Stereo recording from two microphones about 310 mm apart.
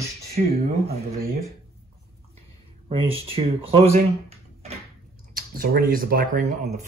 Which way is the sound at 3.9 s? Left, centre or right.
Centre.